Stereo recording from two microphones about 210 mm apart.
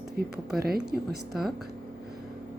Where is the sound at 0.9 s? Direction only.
Centre (ahead or behind).